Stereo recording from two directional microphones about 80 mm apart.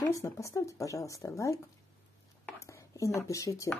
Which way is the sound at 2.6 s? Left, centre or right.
Left.